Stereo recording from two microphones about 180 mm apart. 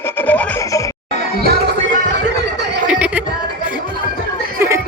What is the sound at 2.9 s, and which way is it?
Music, 5° right (ahead or behind).